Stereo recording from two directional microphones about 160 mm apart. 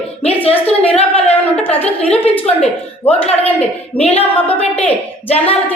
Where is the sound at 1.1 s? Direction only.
10° left (ahead or behind).